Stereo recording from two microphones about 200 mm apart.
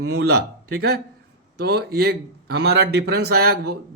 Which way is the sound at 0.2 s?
50° right (ahead or behind).